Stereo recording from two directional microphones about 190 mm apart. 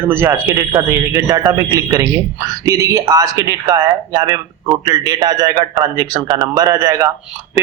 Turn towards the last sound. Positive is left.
turn(degrees=-15)  # may be behind; listen again after turning